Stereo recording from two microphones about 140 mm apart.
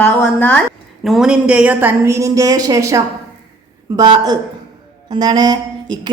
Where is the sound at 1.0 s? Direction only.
5° right (ahead or behind); by 6.0 s 30° right (ahead or behind).